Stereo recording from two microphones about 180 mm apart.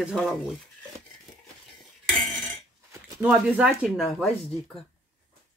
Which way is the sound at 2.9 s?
15° right (ahead or behind).